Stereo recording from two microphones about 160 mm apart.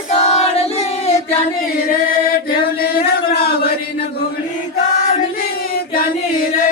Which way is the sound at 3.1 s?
80° left.